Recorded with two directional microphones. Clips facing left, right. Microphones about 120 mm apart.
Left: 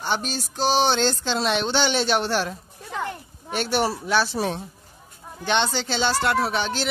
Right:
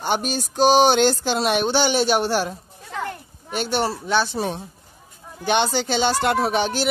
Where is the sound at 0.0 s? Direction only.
15° right (ahead or behind).